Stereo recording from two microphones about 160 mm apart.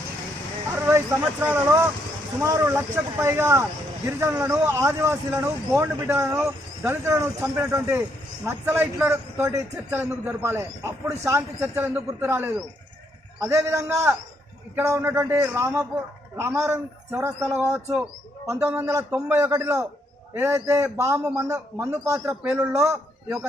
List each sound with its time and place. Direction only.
0.8 s speech: 15° right (ahead or behind)